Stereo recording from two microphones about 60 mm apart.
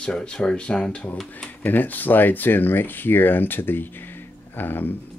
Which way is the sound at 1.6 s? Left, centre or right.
Left.